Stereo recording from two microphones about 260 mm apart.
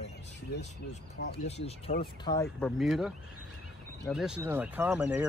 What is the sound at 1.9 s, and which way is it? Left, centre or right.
Speech, left.